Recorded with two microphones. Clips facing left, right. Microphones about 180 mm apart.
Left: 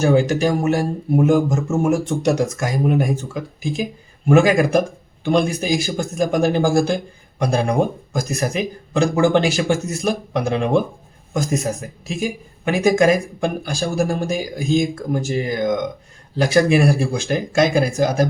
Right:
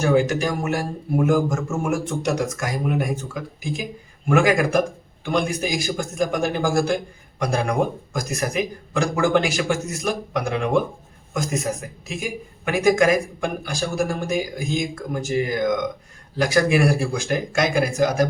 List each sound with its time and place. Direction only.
0.0 s a man's voice: 30° left (ahead or behind)